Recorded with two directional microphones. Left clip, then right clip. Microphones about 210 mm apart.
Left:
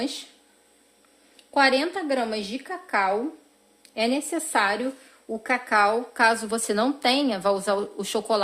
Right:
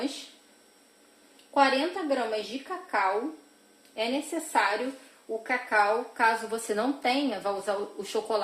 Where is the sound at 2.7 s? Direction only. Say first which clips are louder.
Left 1 dB; 50° left (ahead or behind).